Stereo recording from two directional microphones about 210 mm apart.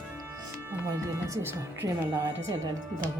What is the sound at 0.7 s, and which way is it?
Speech, 15° right (ahead or behind).